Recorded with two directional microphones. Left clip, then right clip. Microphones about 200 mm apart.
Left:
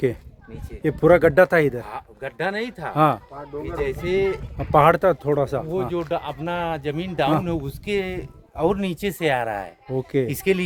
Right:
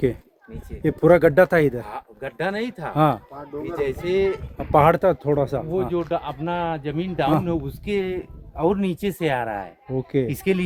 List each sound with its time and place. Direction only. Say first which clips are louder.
0.8 s speech: even; 10° left (ahead or behind)
4.5 s speech: left 1 dB; 10° left (ahead or behind)
5.9 s a man's voice: right 1 dB; 60° left (ahead or behind)